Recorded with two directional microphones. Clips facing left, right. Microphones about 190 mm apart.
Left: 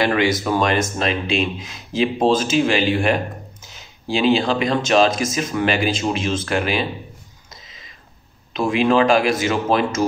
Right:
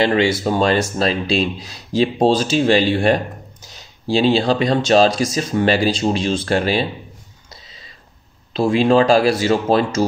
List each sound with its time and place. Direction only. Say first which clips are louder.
0.0 s speech: right 2 dB; 25° right (ahead or behind)
8.5 s speech: right 3 dB; 35° right (ahead or behind)